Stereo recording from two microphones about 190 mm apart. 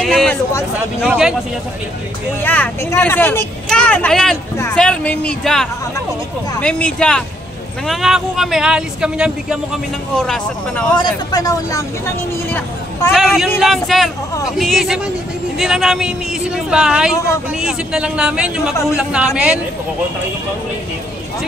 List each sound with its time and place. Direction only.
0.0 s speech: centre (ahead or behind)
2.4 s speech: 10° left (ahead or behind)
11.0 s speech: 20° left (ahead or behind)
13.1 s speech: centre (ahead or behind)